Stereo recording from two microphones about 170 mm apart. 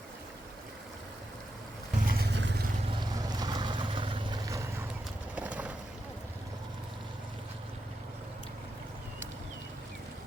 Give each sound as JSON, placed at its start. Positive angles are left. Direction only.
{"t": 2.0, "sound": "vehicle", "side_deg": -70}
{"t": 3.0, "sound": "vehicle", "side_deg": -25}
{"t": 5.3, "sound": "horse", "side_deg": -10}